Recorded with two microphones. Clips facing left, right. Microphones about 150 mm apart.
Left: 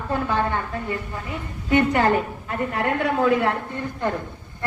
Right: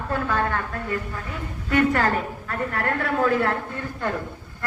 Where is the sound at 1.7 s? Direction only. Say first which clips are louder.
Left 2 dB; 20° left (ahead or behind).